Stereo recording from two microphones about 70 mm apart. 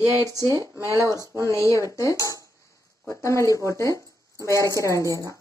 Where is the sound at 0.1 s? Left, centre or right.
Right.